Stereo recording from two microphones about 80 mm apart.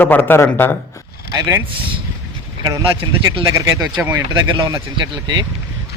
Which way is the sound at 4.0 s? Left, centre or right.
Right.